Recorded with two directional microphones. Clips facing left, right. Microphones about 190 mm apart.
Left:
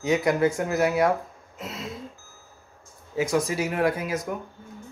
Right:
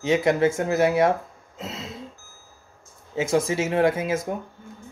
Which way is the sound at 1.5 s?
25° right (ahead or behind).